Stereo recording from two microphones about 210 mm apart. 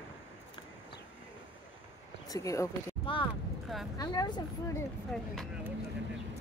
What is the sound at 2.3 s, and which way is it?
Speech, 15° left (ahead or behind).